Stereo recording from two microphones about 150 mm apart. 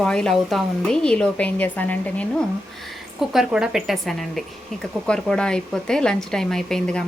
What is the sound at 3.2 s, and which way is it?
Speech, centre (ahead or behind).